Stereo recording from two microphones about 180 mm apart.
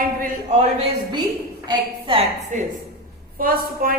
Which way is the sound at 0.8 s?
30° right (ahead or behind).